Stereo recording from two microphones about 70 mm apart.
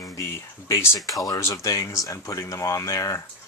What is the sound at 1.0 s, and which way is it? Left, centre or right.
Speech, left.